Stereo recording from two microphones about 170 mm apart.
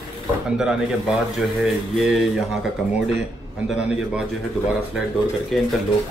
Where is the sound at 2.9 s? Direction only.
40° left (ahead or behind).